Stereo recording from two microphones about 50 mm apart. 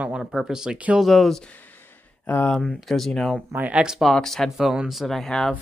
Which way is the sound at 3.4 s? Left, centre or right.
Right.